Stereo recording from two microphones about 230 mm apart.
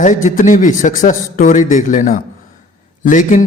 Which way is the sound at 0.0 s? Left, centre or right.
Left.